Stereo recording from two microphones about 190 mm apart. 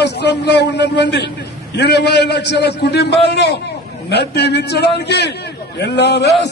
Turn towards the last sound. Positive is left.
turn(degrees=60)  # may be behind; listen again after turning